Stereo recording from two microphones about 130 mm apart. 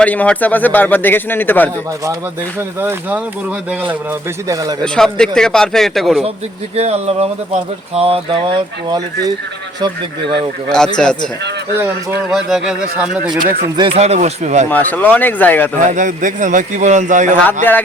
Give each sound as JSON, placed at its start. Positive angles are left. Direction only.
{"t": 0.0, "sound": "a man's voice", "side_deg": 10}
{"t": 2.6, "sound": "speech", "side_deg": -15}
{"t": 4.4, "sound": "a man's voice", "side_deg": -25}
{"t": 4.8, "sound": "a man's voice", "side_deg": 5}
{"t": 6.7, "sound": "speech", "side_deg": -55}
{"t": 10.9, "sound": "a man's voice", "side_deg": 5}
{"t": 12.3, "sound": "a man's voice", "side_deg": -5}
{"t": 13.4, "sound": "speech", "side_deg": -35}
{"t": 13.9, "sound": "speech", "side_deg": -55}
{"t": 14.7, "sound": "a man's voice", "side_deg": 15}
{"t": 15.8, "sound": "speech", "side_deg": -75}
{"t": 17.4, "sound": "a man's voice", "side_deg": 15}